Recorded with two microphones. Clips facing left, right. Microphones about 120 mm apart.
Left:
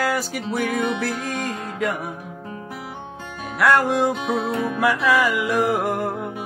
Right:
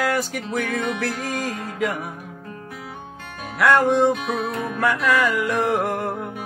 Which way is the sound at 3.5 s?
Centre (ahead or behind).